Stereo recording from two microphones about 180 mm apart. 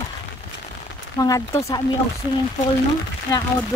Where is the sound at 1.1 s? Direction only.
20° left (ahead or behind).